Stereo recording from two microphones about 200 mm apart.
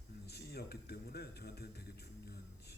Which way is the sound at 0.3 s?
55° left (ahead or behind).